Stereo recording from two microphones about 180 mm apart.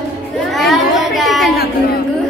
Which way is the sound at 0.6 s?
Centre (ahead or behind).